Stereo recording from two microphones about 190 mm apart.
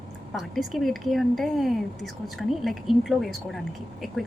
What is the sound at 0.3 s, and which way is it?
A woman's voice, centre (ahead or behind).